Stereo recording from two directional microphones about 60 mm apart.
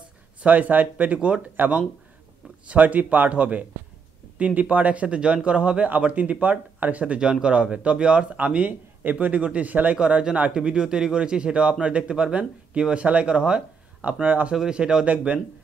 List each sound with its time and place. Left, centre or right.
0.4 s speech: right
9.9 s speech: centre
14.5 s speech: centre
15.0 s speech: right